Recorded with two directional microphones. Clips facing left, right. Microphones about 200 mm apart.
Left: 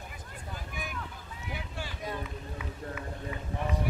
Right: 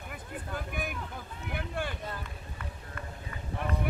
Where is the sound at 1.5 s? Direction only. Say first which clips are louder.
Right 5 dB; 55° right (ahead or behind).